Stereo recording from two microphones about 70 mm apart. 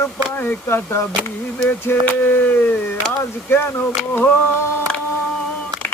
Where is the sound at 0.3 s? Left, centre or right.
Left.